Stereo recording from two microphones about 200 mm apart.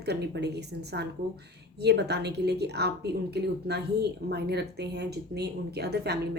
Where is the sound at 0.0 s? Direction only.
55° right (ahead or behind).